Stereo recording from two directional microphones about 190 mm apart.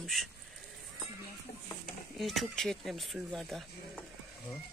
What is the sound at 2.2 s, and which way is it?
Speech, centre (ahead or behind).